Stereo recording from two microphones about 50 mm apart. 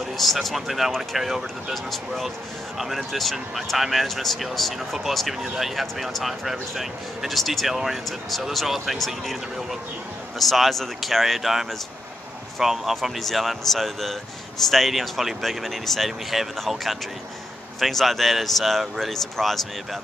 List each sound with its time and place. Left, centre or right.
0.2 s speech: centre